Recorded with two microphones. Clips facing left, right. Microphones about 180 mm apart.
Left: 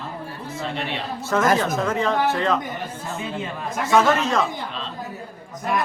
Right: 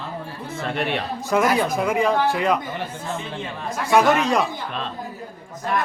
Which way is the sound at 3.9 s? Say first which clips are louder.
Right 1 dB; 15° right (ahead or behind).